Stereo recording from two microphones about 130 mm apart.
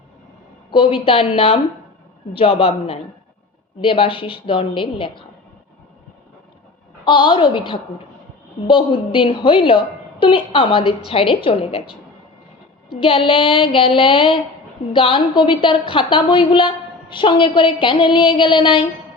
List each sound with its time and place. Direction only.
0.7 s a woman's voice: 40° left (ahead or behind)
7.0 s a woman's voice: 40° left (ahead or behind)
13.0 s a woman's voice: 40° left (ahead or behind)